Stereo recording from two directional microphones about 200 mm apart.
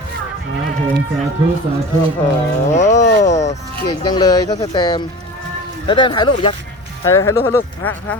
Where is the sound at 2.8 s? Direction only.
35° left (ahead or behind).